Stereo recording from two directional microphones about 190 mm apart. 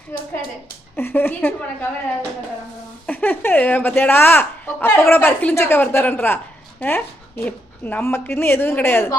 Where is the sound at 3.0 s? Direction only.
10° left (ahead or behind).